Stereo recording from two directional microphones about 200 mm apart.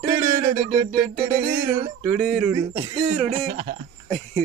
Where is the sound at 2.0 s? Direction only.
Centre (ahead or behind).